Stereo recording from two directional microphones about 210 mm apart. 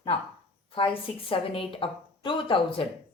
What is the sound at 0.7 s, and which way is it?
Speech, 25° left (ahead or behind).